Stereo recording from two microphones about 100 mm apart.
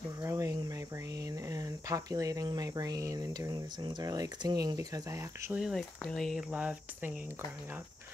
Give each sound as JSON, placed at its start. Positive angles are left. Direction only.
{"t": 0.2, "sound": "speech", "side_deg": -30}
{"t": 5.6, "sound": "speech", "side_deg": 5}
{"t": 6.5, "sound": "speech", "side_deg": -15}